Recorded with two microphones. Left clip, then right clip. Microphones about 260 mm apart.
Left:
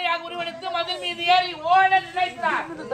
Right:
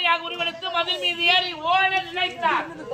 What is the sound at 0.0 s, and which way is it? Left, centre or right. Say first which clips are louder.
A man's voice: right 3 dB; centre.